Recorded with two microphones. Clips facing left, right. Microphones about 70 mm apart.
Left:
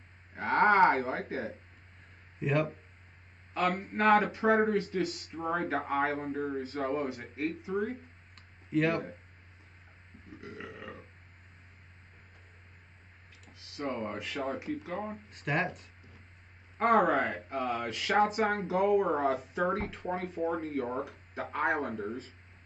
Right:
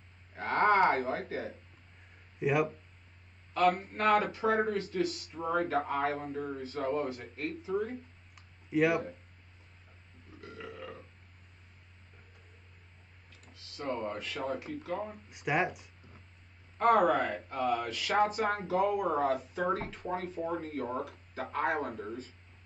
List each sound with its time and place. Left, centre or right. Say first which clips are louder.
0.3 s cattle: left 2 dB; left
2.4 s speech: right 1 dB; centre
3.5 s speech: right 2 dB; left
8.4 s clicking: right 1 dB; centre
10.4 s speech: even; left
13.5 s speech: left 1 dB; centre
15.2 s speech: right 2 dB; centre
16.7 s speech: even; left